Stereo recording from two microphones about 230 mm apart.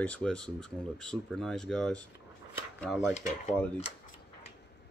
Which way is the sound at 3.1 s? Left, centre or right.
Left.